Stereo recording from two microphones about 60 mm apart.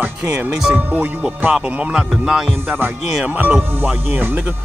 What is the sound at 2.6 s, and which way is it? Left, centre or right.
Speech, right.